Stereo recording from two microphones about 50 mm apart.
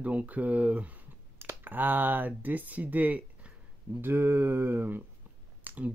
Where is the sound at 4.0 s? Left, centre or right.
Right.